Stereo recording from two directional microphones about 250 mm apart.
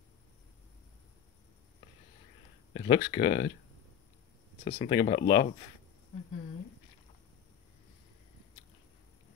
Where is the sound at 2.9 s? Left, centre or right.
Centre.